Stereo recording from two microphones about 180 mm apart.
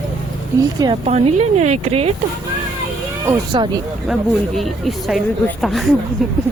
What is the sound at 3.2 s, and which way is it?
Speech, 15° right (ahead or behind).